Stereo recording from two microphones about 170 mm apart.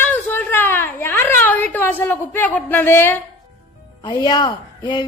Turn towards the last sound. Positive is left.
turn(degrees=25)  # may be behind; listen again after turning